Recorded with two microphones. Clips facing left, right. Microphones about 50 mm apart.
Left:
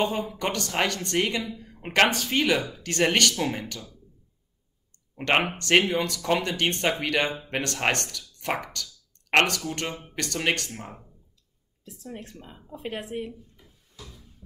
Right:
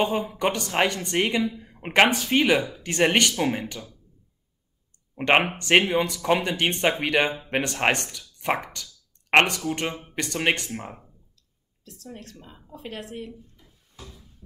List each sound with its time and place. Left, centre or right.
0.0 s speech: centre
5.1 s speech: centre
11.8 s speech: centre